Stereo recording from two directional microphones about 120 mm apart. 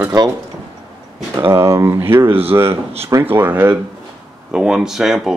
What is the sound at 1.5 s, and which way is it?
Speech, 25° right (ahead or behind).